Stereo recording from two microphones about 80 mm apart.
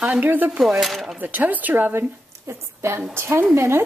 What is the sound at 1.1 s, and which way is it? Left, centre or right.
Speech, right.